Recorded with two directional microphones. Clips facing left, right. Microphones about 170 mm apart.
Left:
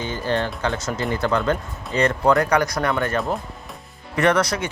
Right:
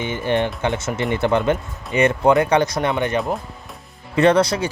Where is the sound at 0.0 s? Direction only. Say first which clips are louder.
Right 3 dB; 20° right (ahead or behind).